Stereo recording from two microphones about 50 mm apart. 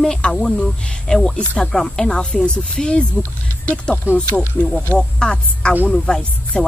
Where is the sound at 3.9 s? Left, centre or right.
Left.